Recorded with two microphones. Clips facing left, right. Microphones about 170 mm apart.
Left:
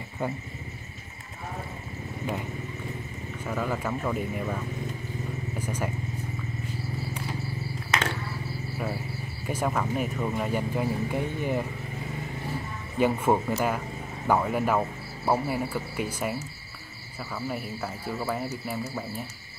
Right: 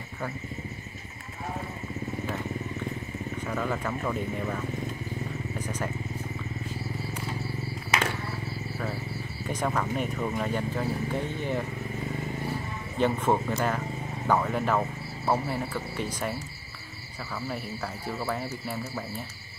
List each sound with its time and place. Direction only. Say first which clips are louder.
3.4 s speech: left 2 dB; 5° left (ahead or behind)
5.6 s speech: left 2 dB; 10° left (ahead or behind)
9.5 s speech: left 1 dB; 5° left (ahead or behind)
13.0 s speech: left 2 dB; 10° left (ahead or behind)
17.5 s speech: left 2 dB; 5° left (ahead or behind)